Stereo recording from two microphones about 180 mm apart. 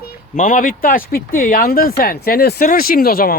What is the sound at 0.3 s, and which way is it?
Speech, 45° left (ahead or behind).